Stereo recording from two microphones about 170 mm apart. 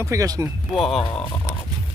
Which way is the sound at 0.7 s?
Centre (ahead or behind).